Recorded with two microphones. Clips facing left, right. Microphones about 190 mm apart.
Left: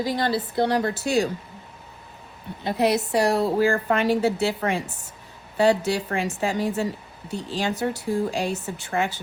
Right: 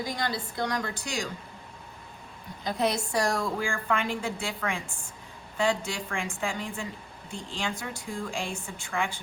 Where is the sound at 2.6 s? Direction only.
65° left (ahead or behind).